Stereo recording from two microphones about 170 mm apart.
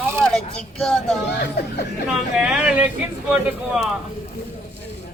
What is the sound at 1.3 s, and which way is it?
Speech, 75° left (ahead or behind).